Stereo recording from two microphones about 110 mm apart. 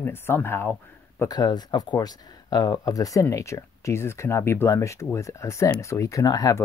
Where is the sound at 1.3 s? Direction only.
40° left (ahead or behind).